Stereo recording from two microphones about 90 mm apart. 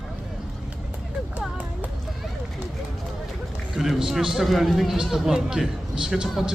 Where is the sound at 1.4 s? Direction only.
15° right (ahead or behind).